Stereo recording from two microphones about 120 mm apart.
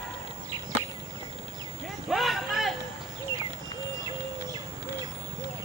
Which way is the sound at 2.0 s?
Centre (ahead or behind).